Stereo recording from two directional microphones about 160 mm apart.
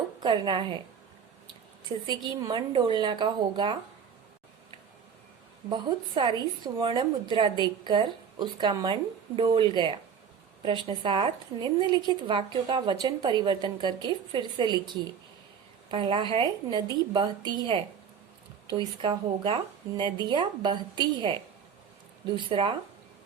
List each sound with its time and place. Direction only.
0.2 s a woman's voice: 30° right (ahead or behind)
2.0 s a woman's voice: 30° right (ahead or behind)
5.6 s a woman's voice: 30° right (ahead or behind)
22.4 s a woman's voice: 30° right (ahead or behind)